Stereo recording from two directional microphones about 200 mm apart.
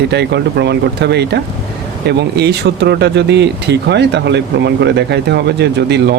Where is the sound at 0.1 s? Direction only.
60° right (ahead or behind).